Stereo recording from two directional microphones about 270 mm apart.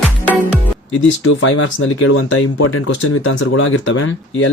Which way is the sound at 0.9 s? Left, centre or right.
Left.